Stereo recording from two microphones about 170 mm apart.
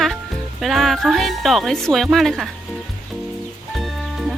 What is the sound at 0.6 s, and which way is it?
Speech, centre (ahead or behind).